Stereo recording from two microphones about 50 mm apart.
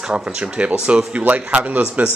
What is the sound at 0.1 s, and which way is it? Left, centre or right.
A man's voice, right.